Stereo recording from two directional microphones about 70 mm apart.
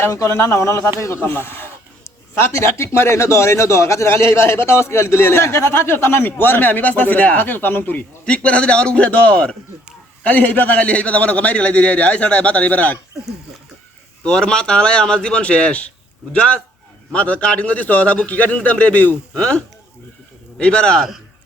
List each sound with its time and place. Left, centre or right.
0.1 s speech: left
1.2 s a man's voice: left
8.4 s a man's voice: centre
14.3 s a man's voice: centre